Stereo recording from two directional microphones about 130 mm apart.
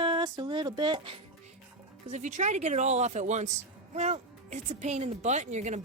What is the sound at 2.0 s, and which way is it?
Speech, 65° right (ahead or behind).